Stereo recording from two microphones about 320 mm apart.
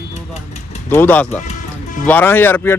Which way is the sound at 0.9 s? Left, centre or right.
Centre.